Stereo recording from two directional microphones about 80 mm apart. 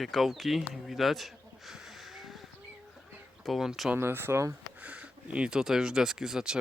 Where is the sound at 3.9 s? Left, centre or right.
Right.